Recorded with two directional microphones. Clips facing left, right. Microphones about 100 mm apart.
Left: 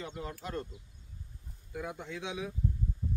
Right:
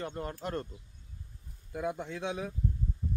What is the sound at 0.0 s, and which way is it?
Speech, 50° right (ahead or behind).